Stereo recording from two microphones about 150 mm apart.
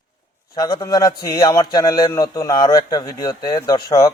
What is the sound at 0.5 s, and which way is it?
A man's voice, 25° left (ahead or behind).